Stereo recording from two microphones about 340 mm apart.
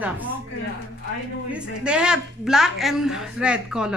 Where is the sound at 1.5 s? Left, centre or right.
Centre.